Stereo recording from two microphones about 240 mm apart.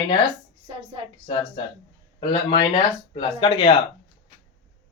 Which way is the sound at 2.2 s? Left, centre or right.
Centre.